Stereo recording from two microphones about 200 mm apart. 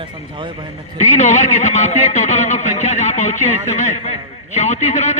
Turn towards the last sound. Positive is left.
turn(degrees=35)  # may be behind; listen again after turning